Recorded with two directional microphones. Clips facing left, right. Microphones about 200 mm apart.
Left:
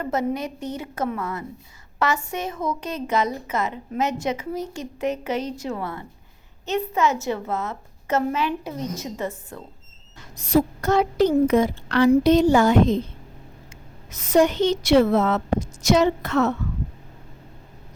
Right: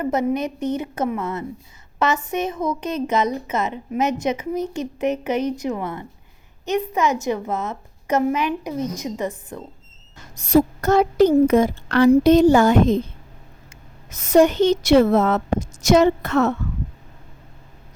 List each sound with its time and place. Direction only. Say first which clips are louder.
0.0 s a woman's voice: right 4 dB; 20° right (ahead or behind)
10.3 s speech: right 3 dB; 45° right (ahead or behind)
14.1 s speech: right 3 dB; 45° right (ahead or behind)